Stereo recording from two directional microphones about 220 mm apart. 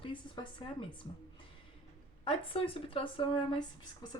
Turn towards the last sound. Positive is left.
turn(degrees=20)  # may be behind; listen again after turning